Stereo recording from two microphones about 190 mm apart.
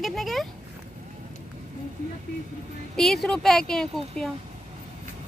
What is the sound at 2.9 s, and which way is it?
Speech, centre (ahead or behind).